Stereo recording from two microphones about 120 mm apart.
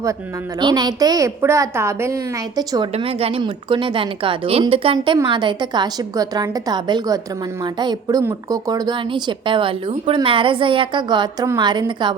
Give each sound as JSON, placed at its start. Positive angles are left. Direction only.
{"t": 0.6, "sound": "a woman's voice", "side_deg": -35}
{"t": 2.9, "sound": "a woman's voice", "side_deg": -55}
{"t": 3.4, "sound": "a woman's voice", "side_deg": -45}